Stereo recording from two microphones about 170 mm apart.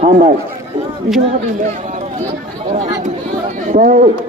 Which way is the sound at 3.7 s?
55° right (ahead or behind).